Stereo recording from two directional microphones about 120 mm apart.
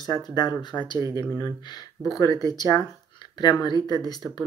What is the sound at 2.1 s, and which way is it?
Speech, 30° left (ahead or behind).